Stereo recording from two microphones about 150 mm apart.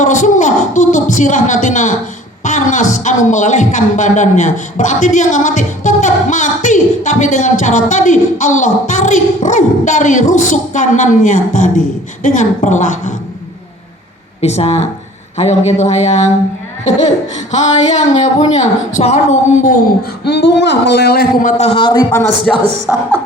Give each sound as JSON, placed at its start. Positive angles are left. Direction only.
{"t": 0.0, "sound": "a sound", "side_deg": 55}
{"t": 2.9, "sound": "a man's voice", "side_deg": 55}
{"t": 14.4, "sound": "speech", "side_deg": 45}
{"t": 17.5, "sound": "speech", "side_deg": 50}
{"t": 20.2, "sound": "speech", "side_deg": 90}
{"t": 21.6, "sound": "a man's voice", "side_deg": 35}
{"t": 22.5, "sound": "a woman's voice", "side_deg": 5}
{"t": 22.9, "sound": "speech", "side_deg": -10}